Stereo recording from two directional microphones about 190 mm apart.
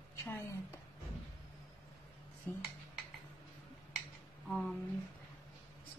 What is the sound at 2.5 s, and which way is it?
Speech, 10° left (ahead or behind).